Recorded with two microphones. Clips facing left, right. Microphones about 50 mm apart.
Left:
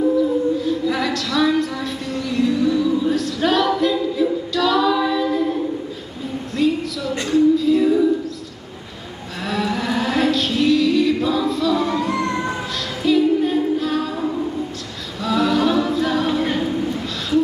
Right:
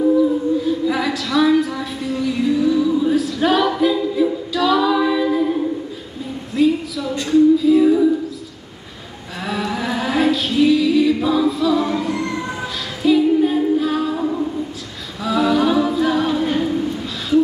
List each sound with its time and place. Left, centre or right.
0.6 s a sound: centre
7.2 s music: centre
9.5 s music: centre
12.1 s music: left
13.0 s a capella: centre